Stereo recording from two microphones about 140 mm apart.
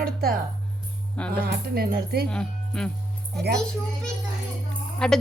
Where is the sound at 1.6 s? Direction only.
90° right.